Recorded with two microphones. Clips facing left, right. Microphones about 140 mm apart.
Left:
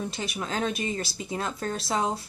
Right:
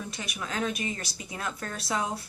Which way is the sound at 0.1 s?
30° left (ahead or behind).